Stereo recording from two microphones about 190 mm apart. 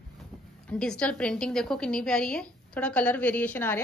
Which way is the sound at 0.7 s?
5° left (ahead or behind).